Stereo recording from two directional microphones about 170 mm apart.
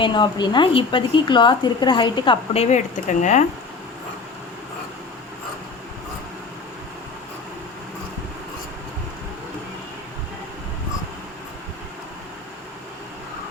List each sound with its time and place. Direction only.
0.0 s a woman's voice: 25° left (ahead or behind); by 3.4 s 45° left (ahead or behind)